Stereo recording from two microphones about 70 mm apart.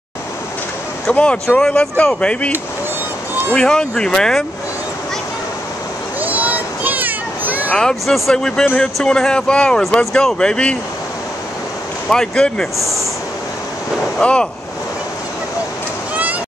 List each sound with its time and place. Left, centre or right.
1.1 s speech: centre
3.5 s speech: centre
6.2 s children playing: right
7.9 s speech: centre
12.1 s speech: centre
12.7 s a sound: centre
14.2 s speech: centre